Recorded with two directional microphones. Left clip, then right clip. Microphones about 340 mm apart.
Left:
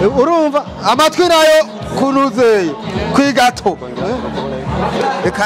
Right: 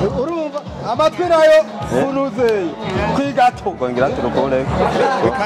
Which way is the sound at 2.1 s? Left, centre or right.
Left.